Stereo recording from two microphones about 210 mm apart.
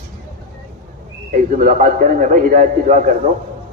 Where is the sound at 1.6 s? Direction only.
40° right (ahead or behind).